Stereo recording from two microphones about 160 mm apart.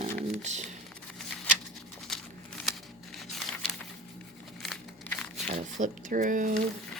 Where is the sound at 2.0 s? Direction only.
Centre (ahead or behind).